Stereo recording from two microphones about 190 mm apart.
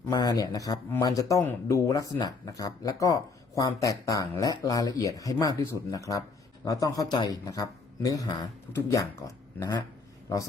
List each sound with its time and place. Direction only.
0.1 s a man's voice: 20° left (ahead or behind)